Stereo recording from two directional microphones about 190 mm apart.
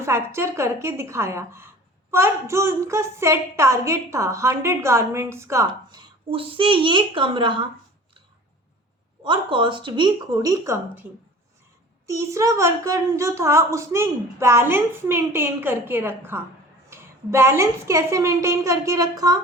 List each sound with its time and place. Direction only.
0.0 s a woman's voice: 15° right (ahead or behind)
9.2 s a woman's voice: 25° right (ahead or behind)
12.0 s a woman's voice: 15° right (ahead or behind)